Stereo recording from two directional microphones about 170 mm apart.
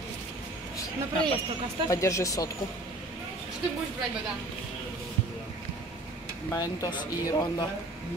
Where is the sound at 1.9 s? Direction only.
20° left (ahead or behind).